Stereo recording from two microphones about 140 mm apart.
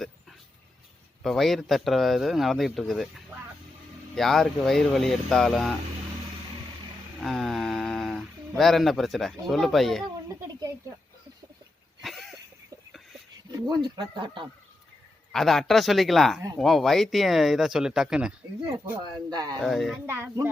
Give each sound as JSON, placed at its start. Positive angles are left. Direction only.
{"t": 1.2, "sound": "speech", "side_deg": 0}
{"t": 7.2, "sound": "speech", "side_deg": 0}
{"t": 12.0, "sound": "a sound", "side_deg": 0}
{"t": 13.5, "sound": "speech", "side_deg": -30}
{"t": 15.3, "sound": "speech", "side_deg": 5}
{"t": 19.3, "sound": "speech", "side_deg": -30}
{"t": 19.5, "sound": "speech", "side_deg": 0}
{"t": 20.1, "sound": "speech", "side_deg": -15}